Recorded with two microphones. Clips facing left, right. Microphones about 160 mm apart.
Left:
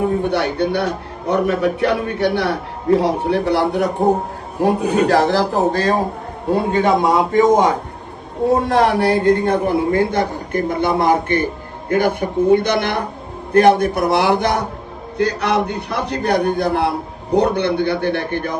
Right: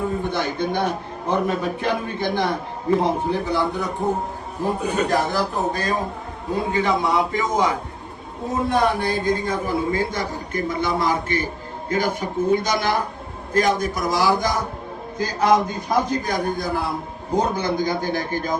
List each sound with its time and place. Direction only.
0.3 s a man's voice: 75° left (ahead or behind)
6.5 s a man's voice: 60° left (ahead or behind)
8.6 s a man's voice: 85° left; by 18.5 s 65° left (ahead or behind)